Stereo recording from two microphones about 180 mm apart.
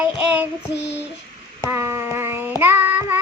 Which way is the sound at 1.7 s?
15° right (ahead or behind).